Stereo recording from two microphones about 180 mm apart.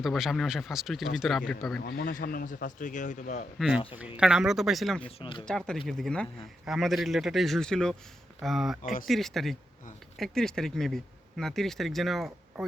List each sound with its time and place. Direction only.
0.0 s speech: centre (ahead or behind)
1.8 s speech: 55° left (ahead or behind)
4.2 s speech: 5° right (ahead or behind)
5.0 s speech: 30° left (ahead or behind)
5.5 s speech: 5° left (ahead or behind)
8.8 s speech: 50° left (ahead or behind)
9.0 s speech: centre (ahead or behind)